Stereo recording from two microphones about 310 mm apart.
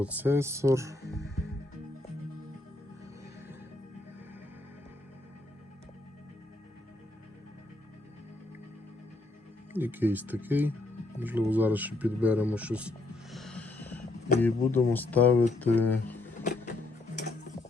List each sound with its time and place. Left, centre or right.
0.0 s speech: centre
9.7 s speech: centre
13.3 s music: centre
14.4 s speech: centre
16.4 s music: left